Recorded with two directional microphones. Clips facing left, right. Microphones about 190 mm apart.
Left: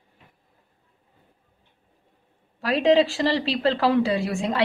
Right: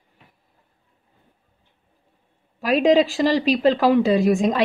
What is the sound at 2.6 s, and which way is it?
A woman's voice, 15° right (ahead or behind).